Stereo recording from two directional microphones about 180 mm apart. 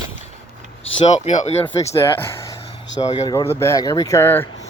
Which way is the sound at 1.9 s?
15° left (ahead or behind).